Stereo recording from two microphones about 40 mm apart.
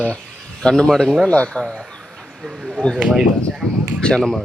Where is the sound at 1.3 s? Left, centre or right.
Left.